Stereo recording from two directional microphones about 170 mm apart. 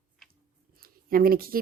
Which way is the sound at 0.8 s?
60° right (ahead or behind).